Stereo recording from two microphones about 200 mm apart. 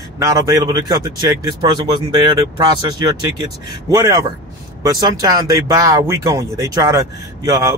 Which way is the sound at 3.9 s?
15° right (ahead or behind).